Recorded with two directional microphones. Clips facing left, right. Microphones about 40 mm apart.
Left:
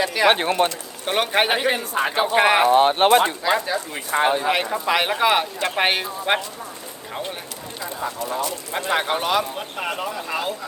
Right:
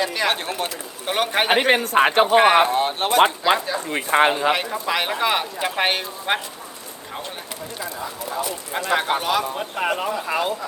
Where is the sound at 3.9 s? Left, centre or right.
Right.